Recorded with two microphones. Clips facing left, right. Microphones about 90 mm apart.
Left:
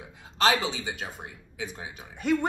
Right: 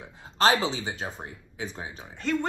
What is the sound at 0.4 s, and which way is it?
Speech, 35° right (ahead or behind).